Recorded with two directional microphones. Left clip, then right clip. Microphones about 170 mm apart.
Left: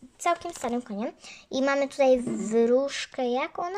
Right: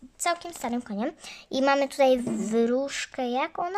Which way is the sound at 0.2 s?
10° right (ahead or behind).